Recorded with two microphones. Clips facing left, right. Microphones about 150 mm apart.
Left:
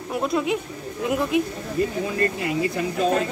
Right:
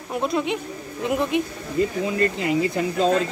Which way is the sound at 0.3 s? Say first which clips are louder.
Left 1 dB; centre (ahead or behind).